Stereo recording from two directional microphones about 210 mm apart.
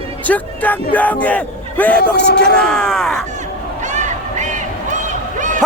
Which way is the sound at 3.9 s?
35° right (ahead or behind).